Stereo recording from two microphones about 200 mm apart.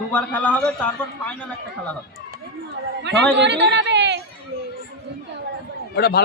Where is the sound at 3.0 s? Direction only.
60° right (ahead or behind).